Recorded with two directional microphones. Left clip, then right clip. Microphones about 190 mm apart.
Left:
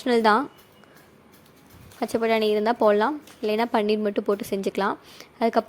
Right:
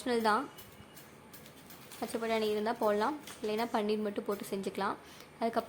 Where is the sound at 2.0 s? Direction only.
40° left (ahead or behind).